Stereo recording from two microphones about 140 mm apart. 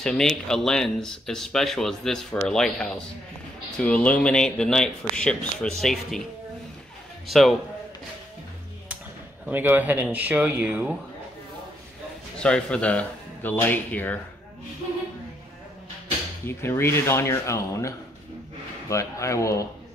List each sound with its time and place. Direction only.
0.0 s speech: 5° left (ahead or behind)
7.2 s speech: centre (ahead or behind)
9.5 s speech: 15° right (ahead or behind)
12.4 s speech: 5° left (ahead or behind)
16.4 s speech: 15° left (ahead or behind)